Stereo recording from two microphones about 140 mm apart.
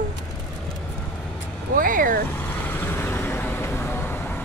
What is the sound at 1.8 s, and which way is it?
Vehicle, 75° right (ahead or behind).